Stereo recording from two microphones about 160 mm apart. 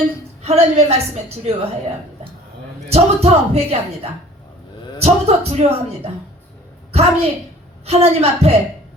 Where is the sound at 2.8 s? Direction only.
40° right (ahead or behind).